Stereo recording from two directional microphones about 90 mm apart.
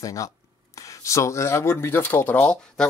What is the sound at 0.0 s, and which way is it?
Speech, 40° left (ahead or behind).